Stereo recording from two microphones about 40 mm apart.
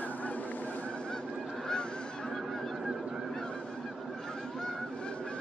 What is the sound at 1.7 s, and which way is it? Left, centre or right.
Goose, centre.